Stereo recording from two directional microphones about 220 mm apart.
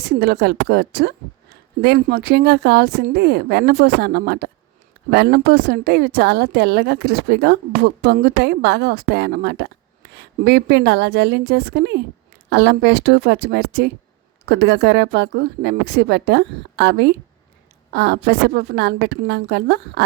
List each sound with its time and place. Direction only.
0.0 s a woman's voice: 45° right (ahead or behind)